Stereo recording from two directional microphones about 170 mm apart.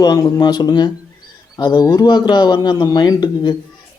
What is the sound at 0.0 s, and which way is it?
Speech, 25° left (ahead or behind).